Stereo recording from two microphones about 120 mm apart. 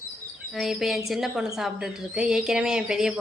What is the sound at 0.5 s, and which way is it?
A woman's voice, centre (ahead or behind).